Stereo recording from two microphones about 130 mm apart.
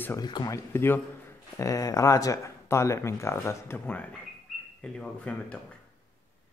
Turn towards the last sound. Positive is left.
turn(degrees=10)  # may be behind; listen again after turning